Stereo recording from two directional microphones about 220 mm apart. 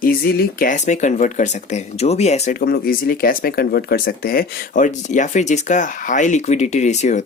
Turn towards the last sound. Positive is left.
turn(degrees=30)  # may be behind; listen again after turning